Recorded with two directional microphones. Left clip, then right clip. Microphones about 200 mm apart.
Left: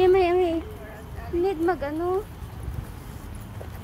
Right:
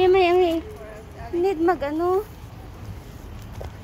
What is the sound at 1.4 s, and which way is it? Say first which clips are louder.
Speech: right 3 dB; 30° right (ahead or behind).